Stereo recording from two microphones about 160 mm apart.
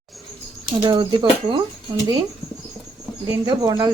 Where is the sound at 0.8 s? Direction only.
30° right (ahead or behind).